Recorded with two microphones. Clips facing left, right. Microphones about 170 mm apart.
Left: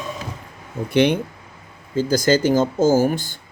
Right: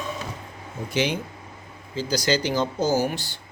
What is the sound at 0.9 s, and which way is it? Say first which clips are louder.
Speech: left 8 dB; 60° left (ahead or behind).